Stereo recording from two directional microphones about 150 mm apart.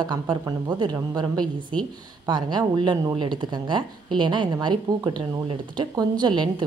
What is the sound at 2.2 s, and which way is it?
Speech, 30° right (ahead or behind).